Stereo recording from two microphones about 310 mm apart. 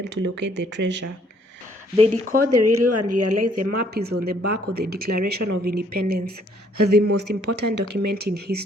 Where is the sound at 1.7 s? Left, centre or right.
Right.